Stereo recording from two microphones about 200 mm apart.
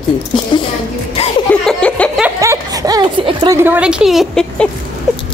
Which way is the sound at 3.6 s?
10° right (ahead or behind).